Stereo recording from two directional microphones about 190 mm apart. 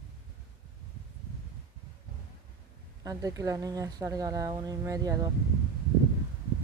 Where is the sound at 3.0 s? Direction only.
15° right (ahead or behind).